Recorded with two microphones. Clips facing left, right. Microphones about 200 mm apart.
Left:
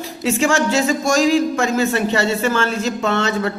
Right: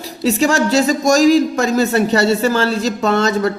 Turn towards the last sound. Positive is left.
turn(degrees=-40)  # may be behind; listen again after turning